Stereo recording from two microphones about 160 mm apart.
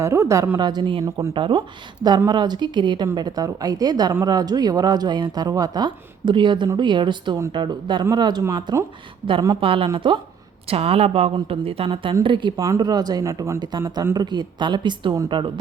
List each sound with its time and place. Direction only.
0.0 s speech: 15° right (ahead or behind)
1.0 s speech: 20° right (ahead or behind)
1.3 s a woman's voice: 30° right (ahead or behind)
9.6 s a woman's voice: 35° right (ahead or behind)